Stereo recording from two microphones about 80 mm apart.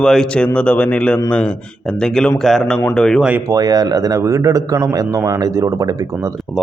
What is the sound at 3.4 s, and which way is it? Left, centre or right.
A man's voice, right.